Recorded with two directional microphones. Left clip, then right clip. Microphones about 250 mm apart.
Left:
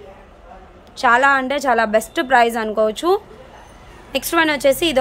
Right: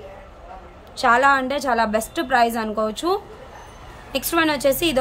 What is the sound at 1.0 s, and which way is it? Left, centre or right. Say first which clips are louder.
Speech: left 2 dB; centre.